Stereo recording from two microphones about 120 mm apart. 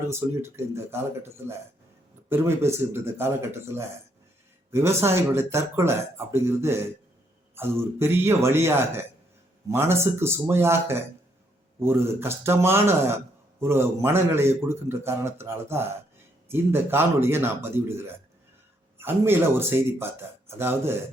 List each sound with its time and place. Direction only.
0.1 s speech: 20° right (ahead or behind)